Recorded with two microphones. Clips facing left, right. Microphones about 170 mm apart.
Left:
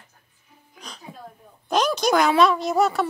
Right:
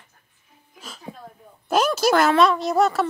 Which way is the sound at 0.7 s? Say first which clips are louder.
Even; 5° right (ahead or behind).